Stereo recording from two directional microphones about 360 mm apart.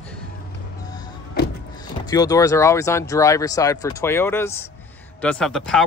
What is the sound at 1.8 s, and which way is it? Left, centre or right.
Speech, centre.